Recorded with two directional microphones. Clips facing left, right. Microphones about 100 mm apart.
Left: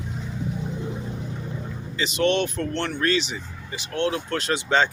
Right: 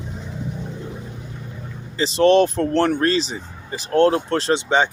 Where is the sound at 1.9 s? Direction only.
35° right (ahead or behind).